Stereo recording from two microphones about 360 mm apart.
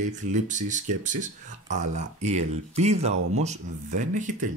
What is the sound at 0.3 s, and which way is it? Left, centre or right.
Speech, right.